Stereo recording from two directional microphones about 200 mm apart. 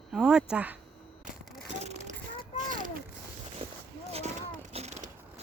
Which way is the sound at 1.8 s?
35° right (ahead or behind).